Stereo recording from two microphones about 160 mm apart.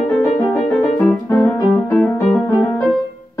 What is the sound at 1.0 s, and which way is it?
Piano, centre (ahead or behind).